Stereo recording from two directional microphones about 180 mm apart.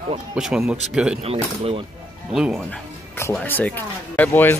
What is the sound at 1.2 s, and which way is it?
Speech, 35° right (ahead or behind).